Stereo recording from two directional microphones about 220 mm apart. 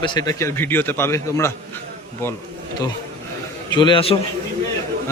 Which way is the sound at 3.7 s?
20° left (ahead or behind).